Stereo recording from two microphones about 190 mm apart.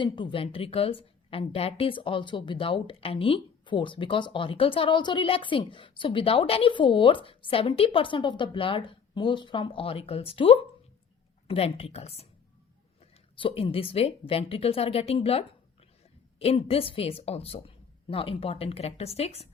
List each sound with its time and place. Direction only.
0.0 s a woman's voice: 25° left (ahead or behind)
13.4 s speech: 30° left (ahead or behind)